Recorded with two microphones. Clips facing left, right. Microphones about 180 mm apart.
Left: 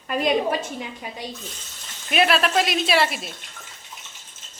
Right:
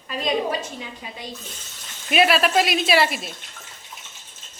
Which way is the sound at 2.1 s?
5° right (ahead or behind).